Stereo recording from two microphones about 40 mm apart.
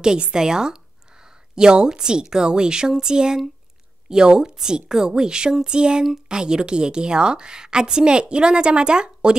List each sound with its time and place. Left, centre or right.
0.3 s a woman's voice: centre